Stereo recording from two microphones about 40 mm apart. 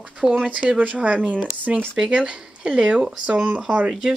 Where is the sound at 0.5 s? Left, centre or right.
Right.